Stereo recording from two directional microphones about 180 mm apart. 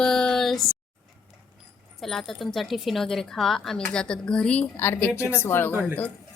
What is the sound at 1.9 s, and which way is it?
Speech, centre (ahead or behind).